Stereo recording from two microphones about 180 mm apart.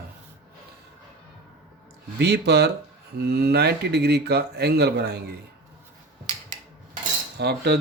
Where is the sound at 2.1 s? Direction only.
65° right (ahead or behind).